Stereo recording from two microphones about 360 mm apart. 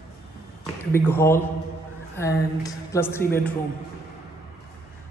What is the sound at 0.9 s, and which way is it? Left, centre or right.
Speech, centre.